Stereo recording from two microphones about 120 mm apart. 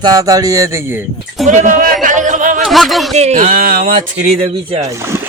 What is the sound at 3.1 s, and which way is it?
Speech, 65° right (ahead or behind).